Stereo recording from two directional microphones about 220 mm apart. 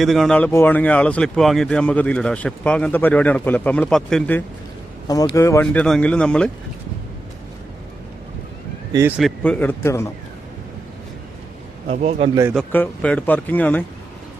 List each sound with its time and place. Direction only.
0.0 s speech: centre (ahead or behind)
5.0 s speech: 15° left (ahead or behind)
8.9 s speech: 10° right (ahead or behind)
9.4 s speech: 5° left (ahead or behind)
11.9 s a man's voice: 30° right (ahead or behind)
12.3 s speech: 15° right (ahead or behind)
12.5 s speech: 5° left (ahead or behind)